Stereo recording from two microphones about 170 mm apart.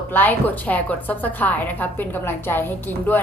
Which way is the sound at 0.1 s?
10° left (ahead or behind).